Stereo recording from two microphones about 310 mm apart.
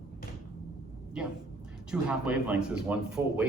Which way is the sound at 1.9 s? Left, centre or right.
Centre.